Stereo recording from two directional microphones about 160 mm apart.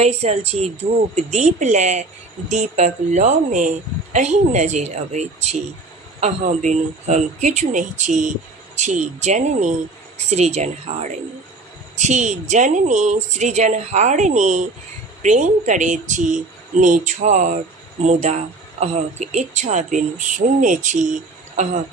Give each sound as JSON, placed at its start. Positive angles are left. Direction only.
{"t": 0.0, "sound": "a woman's voice", "side_deg": -40}